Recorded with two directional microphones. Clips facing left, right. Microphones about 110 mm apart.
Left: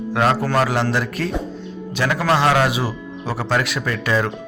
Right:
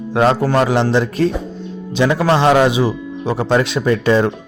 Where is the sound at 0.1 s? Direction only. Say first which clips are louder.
Right 4 dB; 25° right (ahead or behind).